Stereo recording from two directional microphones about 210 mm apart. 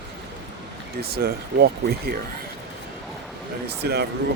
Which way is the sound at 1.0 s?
45° right (ahead or behind).